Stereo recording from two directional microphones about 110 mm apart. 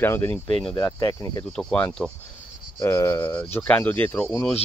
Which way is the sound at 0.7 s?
35° left (ahead or behind).